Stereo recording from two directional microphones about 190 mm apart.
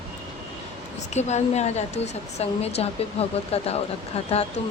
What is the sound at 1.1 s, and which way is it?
Speech, 35° left (ahead or behind).